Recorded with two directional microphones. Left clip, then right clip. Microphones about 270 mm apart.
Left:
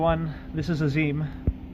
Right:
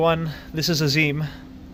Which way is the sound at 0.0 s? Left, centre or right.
Right.